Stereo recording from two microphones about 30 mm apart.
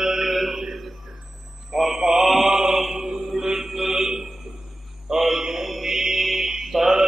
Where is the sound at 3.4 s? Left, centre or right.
Centre.